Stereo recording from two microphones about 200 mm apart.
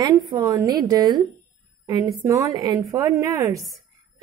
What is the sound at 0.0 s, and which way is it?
A woman's voice, 20° right (ahead or behind).